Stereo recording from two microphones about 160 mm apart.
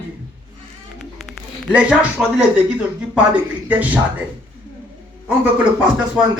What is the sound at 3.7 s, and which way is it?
Speech, 10° right (ahead or behind).